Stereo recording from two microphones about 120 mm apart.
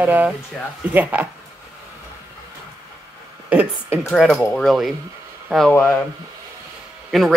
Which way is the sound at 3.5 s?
15° right (ahead or behind).